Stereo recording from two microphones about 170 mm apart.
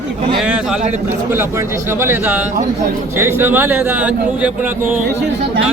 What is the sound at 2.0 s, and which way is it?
Speech, 10° right (ahead or behind).